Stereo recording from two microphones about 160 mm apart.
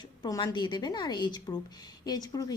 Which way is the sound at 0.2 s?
25° left (ahead or behind).